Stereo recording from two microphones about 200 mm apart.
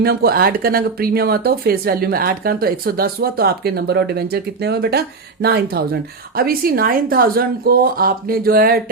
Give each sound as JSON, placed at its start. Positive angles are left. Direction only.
{"t": 0.0, "sound": "speech", "side_deg": -50}